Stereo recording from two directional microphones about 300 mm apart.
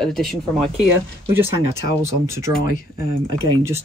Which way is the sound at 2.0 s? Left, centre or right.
Centre.